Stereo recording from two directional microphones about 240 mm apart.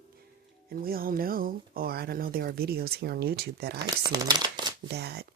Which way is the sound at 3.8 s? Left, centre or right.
Centre.